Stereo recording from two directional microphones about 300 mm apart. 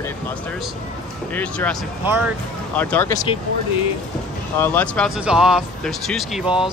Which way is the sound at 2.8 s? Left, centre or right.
Centre.